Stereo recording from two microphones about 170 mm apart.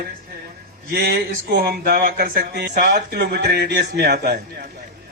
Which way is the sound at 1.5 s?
65° right (ahead or behind).